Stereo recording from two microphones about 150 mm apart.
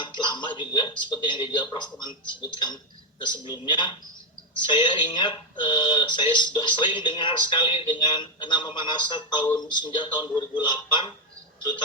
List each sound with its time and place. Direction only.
0.3 s speech: 30° left (ahead or behind)